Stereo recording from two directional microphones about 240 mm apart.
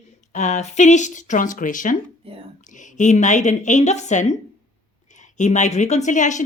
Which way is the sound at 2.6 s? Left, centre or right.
Left.